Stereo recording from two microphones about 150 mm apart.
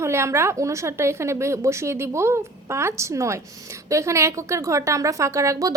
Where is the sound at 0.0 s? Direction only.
20° right (ahead or behind).